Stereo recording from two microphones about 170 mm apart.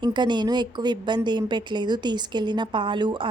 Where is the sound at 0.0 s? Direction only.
25° right (ahead or behind).